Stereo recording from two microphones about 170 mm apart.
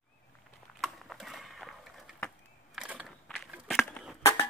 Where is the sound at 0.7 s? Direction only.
Centre (ahead or behind).